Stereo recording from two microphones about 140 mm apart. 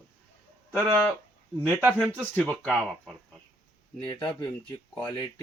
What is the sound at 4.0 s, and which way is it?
Speech, 30° left (ahead or behind).